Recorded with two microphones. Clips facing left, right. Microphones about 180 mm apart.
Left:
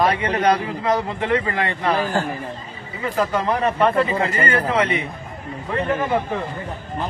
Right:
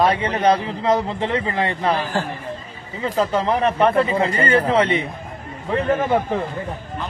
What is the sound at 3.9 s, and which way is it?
Speech, centre (ahead or behind).